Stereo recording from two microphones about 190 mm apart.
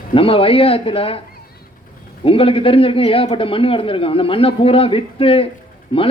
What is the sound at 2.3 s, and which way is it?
Speech, 30° left (ahead or behind).